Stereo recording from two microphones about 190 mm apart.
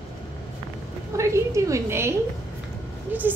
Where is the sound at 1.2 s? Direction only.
15° right (ahead or behind).